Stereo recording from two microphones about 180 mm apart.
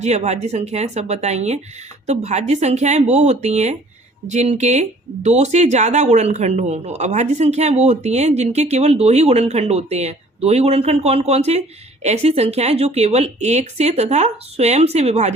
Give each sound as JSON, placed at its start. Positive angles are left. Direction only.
{"t": 0.0, "sound": "speech", "side_deg": -40}